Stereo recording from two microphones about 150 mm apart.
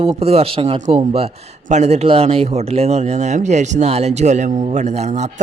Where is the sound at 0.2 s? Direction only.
40° right (ahead or behind).